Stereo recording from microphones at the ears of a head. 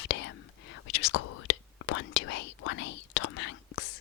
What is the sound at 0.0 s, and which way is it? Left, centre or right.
Whispering, left.